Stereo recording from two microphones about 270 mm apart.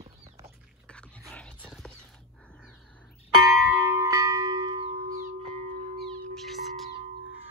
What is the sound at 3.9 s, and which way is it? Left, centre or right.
Tubular bells, centre.